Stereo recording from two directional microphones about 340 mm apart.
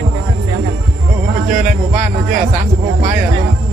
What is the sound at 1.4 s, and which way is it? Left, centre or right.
Speech, right.